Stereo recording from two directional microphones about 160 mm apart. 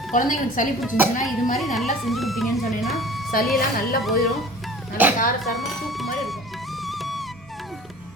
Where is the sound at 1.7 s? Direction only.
Centre (ahead or behind).